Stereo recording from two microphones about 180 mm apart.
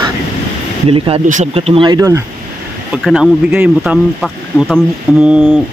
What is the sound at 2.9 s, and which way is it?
Speech, centre (ahead or behind).